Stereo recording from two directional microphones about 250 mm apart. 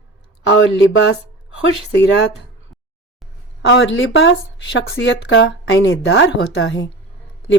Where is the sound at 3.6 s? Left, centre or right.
Left.